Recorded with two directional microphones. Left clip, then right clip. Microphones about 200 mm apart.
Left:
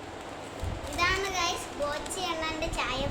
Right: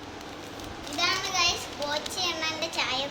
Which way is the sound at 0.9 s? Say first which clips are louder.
Right 1 dB; 40° left (ahead or behind).